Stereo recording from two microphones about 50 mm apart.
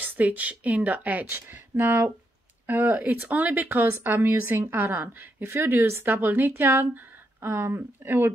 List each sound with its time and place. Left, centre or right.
0.0 s a woman's voice: right
1.3 s a woman's voice: right
4.0 s a woman's voice: right